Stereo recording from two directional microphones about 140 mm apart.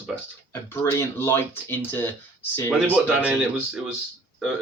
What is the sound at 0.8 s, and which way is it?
Speech, 20° left (ahead or behind).